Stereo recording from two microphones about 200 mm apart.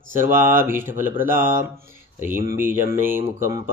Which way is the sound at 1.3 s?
45° right (ahead or behind).